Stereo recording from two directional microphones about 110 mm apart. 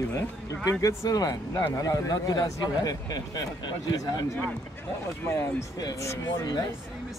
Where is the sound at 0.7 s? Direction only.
35° left (ahead or behind).